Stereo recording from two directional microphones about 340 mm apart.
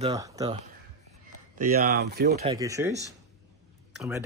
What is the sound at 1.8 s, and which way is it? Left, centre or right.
Speech, right.